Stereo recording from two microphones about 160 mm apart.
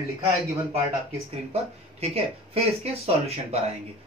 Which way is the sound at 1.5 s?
40° right (ahead or behind).